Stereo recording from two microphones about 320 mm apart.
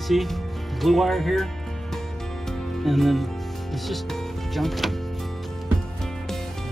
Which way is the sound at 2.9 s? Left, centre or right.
Centre.